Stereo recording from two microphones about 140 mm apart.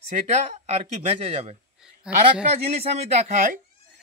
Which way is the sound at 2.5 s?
45° right (ahead or behind).